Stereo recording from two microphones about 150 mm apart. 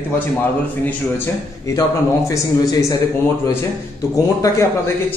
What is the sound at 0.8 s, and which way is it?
A man's voice, 20° left (ahead or behind).